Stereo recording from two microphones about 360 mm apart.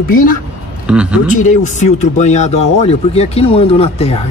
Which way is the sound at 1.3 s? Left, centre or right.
Left.